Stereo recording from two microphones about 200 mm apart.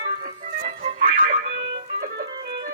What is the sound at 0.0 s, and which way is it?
Music, 45° right (ahead or behind).